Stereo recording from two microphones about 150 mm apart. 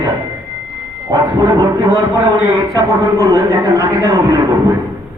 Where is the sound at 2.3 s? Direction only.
5° right (ahead or behind).